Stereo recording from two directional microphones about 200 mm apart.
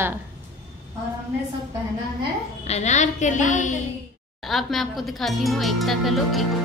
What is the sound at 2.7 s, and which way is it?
A woman's voice, 35° left (ahead or behind).